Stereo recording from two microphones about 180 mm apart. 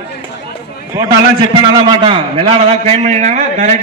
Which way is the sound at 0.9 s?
20° right (ahead or behind).